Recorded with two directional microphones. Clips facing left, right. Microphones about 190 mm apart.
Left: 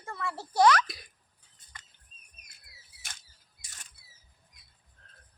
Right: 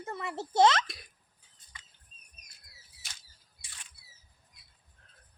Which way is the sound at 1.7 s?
50° left (ahead or behind).